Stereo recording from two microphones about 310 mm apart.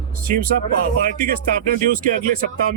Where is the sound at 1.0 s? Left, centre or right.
Right.